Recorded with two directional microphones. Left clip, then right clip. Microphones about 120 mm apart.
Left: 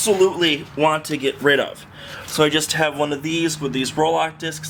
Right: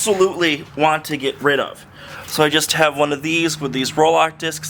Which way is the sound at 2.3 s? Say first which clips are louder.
Right 2 dB; 30° right (ahead or behind).